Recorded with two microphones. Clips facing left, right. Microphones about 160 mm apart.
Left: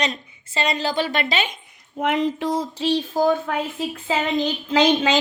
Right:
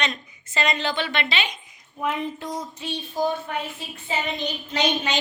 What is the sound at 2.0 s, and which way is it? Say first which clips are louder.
A woman's voice: left 6 dB; 85° left.